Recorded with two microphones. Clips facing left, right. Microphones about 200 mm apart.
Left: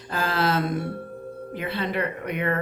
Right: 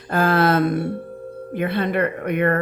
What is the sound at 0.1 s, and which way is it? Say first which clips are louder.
Speech: right 7 dB; 55° right (ahead or behind).